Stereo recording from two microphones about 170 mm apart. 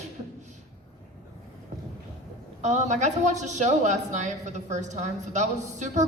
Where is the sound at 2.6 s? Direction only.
45° right (ahead or behind).